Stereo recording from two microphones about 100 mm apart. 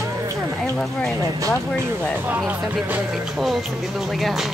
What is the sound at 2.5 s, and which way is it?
Speech, 15° right (ahead or behind).